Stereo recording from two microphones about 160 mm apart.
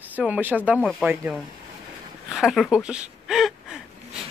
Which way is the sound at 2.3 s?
Centre (ahead or behind).